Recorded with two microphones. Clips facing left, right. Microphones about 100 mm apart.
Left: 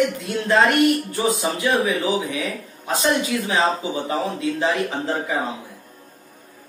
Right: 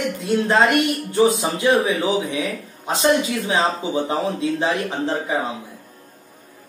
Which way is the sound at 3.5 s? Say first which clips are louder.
Right 1 dB; 25° right (ahead or behind).